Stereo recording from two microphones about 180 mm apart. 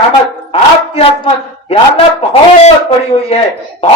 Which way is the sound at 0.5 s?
30° left (ahead or behind).